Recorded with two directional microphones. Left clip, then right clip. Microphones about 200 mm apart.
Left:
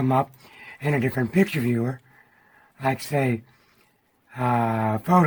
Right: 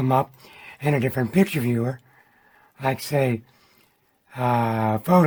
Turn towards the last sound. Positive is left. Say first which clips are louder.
# right 1 dB
turn(degrees=-35)  # may be behind; listen again after turning